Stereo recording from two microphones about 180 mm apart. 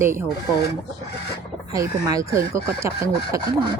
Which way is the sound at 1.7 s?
20° right (ahead or behind).